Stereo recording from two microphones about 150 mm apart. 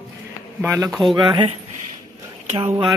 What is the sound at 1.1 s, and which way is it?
Speech, 30° right (ahead or behind).